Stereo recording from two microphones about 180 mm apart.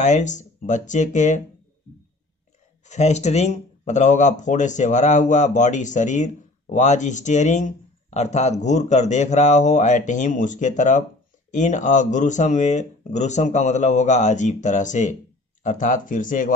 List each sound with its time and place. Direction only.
0.0 s speech: 40° left (ahead or behind)
2.9 s speech: 40° left (ahead or behind)